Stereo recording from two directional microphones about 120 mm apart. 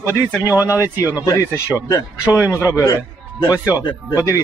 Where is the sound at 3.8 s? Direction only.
35° left (ahead or behind).